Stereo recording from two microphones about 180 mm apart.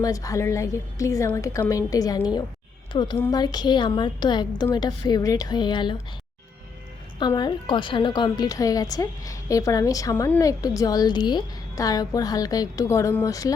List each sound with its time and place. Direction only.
0.0 s a woman's voice: 20° left (ahead or behind)
7.2 s a woman's voice: 25° left (ahead or behind)